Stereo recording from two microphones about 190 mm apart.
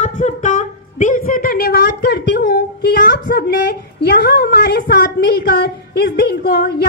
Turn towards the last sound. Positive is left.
turn(degrees=60)  # may be behind; listen again after turning